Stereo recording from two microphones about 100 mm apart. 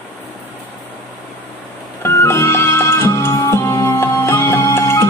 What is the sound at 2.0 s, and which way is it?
Music, 25° left (ahead or behind).